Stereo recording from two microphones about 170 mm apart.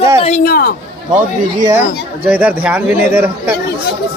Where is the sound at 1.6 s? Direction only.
15° right (ahead or behind).